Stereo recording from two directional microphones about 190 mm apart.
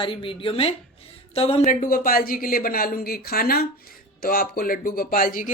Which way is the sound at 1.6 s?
50° left (ahead or behind).